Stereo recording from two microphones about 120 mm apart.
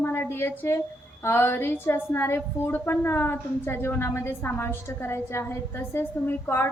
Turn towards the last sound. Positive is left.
turn(degrees=20)  # may be behind; listen again after turning